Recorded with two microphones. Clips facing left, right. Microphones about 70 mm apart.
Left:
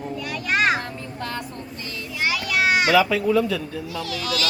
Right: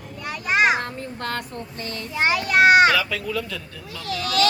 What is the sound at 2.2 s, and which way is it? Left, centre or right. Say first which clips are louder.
Speech: right 5 dB; right.